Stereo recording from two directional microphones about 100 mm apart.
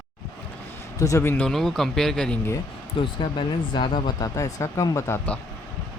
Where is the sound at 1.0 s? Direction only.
30° left (ahead or behind).